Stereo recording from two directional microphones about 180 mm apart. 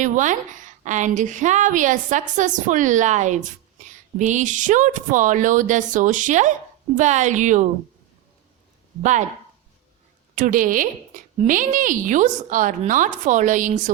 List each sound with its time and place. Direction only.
0.0 s a woman's voice: 45° right (ahead or behind)
10.3 s a woman's voice: 50° right (ahead or behind)